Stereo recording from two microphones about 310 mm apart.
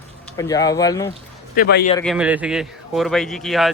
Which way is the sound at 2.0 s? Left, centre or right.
Centre.